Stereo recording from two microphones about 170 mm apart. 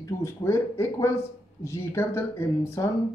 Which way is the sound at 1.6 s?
15° left (ahead or behind).